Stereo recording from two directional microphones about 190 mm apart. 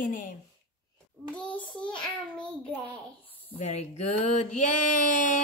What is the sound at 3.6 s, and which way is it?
Speech, 40° left (ahead or behind).